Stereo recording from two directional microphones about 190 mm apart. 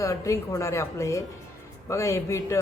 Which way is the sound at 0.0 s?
15° left (ahead or behind).